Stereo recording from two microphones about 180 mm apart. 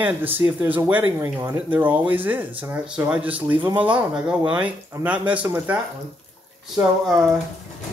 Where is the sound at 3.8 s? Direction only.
5° right (ahead or behind).